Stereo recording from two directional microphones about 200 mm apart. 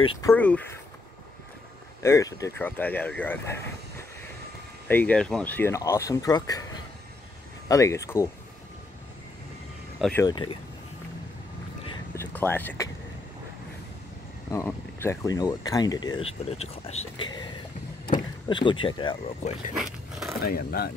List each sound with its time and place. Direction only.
0.0 s speech: 25° left (ahead or behind)
0.3 s speech: 5° left (ahead or behind)
2.0 s speech: 15° left (ahead or behind)
4.8 s speech: 10° left (ahead or behind)
9.9 s speech: centre (ahead or behind)
10.2 s speech: 20° left (ahead or behind)
12.4 s speech: 10° left (ahead or behind)
14.5 s speech: 15° left (ahead or behind)
19.7 s a sound: centre (ahead or behind)
20.4 s speech: 50° left (ahead or behind)